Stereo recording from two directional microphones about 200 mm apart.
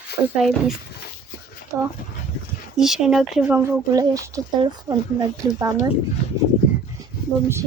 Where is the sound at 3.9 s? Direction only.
15° right (ahead or behind).